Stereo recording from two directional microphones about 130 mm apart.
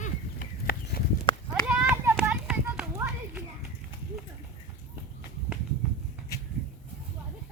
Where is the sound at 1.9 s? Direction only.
20° right (ahead or behind).